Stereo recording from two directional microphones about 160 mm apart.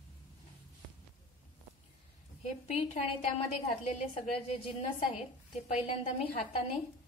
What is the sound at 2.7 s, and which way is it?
A woman's voice, 40° left (ahead or behind).